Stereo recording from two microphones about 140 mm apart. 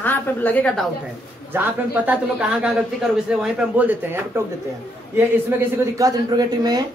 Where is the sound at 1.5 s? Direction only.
15° right (ahead or behind).